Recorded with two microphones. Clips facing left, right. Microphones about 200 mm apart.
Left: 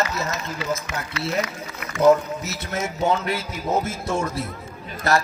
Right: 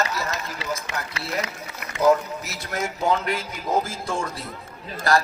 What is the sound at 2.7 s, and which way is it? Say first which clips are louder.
A man's voice: left 1 dB; 25° left (ahead or behind).